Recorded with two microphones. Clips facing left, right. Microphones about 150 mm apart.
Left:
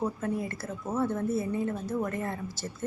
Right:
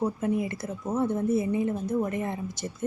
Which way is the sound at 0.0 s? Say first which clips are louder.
Right 4 dB; 15° right (ahead or behind).